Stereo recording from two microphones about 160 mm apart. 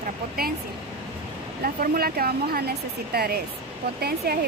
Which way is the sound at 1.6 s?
70° right (ahead or behind).